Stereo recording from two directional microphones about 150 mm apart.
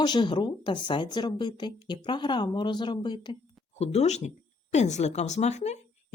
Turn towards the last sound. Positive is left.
turn(degrees=50)  # may be behind; listen again after turning